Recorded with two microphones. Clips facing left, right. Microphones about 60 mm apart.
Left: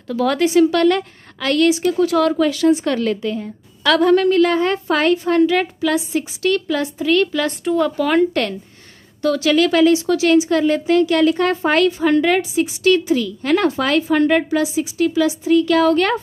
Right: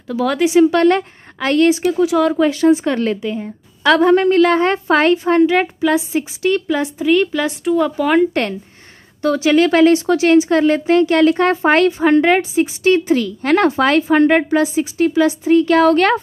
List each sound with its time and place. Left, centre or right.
0.1 s speech: centre
0.5 s a woman's voice: right
2.0 s speech: centre
2.3 s a woman's voice: right
4.4 s a woman's voice: right; by 8.4 s centre
9.2 s a woman's voice: right
13.1 s a woman's voice: right
15.9 s speech: right